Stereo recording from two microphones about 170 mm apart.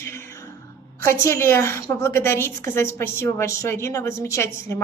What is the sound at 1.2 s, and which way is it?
A woman's voice, 15° left (ahead or behind).